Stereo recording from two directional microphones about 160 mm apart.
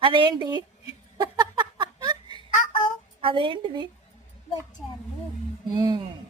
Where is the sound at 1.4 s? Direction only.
30° right (ahead or behind).